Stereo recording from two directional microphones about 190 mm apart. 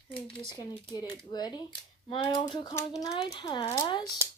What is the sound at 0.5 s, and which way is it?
Speech, 20° left (ahead or behind).